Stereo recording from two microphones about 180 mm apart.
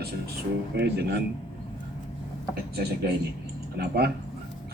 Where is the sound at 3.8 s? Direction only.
60° right (ahead or behind).